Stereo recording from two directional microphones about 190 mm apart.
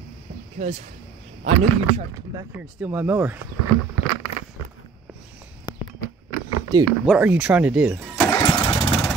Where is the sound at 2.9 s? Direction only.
10° right (ahead or behind).